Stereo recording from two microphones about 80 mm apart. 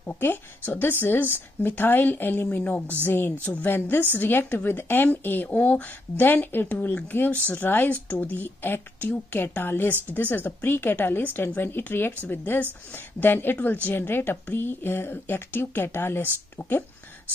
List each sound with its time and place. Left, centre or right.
0.0 s speech: left
3.4 s a woman's voice: centre
3.7 s speech: left